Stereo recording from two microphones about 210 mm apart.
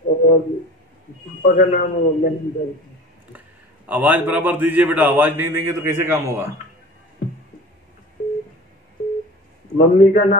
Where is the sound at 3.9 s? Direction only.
10° right (ahead or behind).